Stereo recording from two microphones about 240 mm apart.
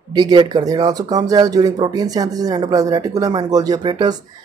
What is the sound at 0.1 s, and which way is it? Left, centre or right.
Speech, centre.